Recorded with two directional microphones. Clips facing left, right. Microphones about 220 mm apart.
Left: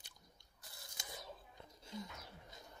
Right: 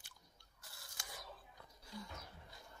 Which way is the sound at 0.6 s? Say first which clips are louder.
Left 1 dB; 20° left (ahead or behind).